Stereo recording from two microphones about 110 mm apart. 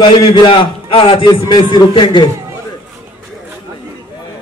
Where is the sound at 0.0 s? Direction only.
50° left (ahead or behind).